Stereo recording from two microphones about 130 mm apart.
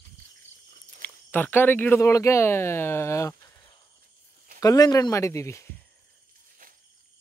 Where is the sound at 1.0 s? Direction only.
15° left (ahead or behind).